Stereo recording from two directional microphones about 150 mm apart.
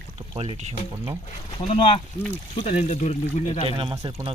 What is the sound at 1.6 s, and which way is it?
Speech, 40° left (ahead or behind).